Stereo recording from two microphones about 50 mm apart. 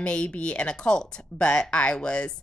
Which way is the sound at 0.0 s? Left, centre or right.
Left.